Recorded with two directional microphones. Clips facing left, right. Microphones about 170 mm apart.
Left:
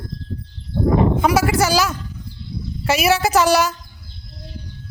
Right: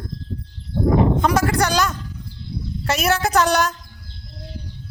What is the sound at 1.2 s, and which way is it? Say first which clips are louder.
A man's voice: left 2 dB; 10° left (ahead or behind).